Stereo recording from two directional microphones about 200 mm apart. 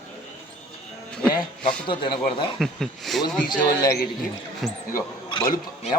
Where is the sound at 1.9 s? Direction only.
25° left (ahead or behind).